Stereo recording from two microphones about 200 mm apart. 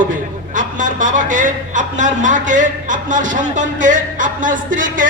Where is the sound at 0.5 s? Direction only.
40° right (ahead or behind).